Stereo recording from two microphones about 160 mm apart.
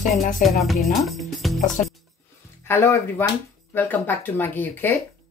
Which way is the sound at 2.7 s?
15° left (ahead or behind).